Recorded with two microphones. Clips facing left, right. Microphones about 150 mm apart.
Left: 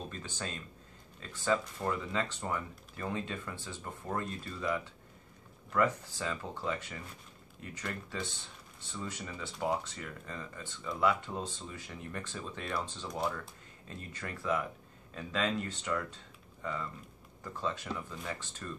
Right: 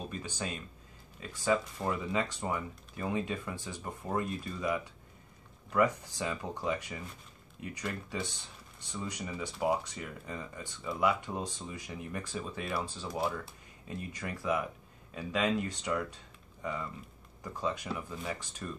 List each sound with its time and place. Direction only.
0.1 s speech: 10° right (ahead or behind)